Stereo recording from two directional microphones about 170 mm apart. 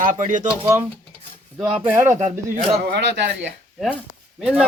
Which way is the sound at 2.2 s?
40° right (ahead or behind).